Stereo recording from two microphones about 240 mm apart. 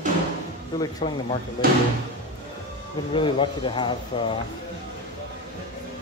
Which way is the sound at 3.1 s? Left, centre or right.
Left.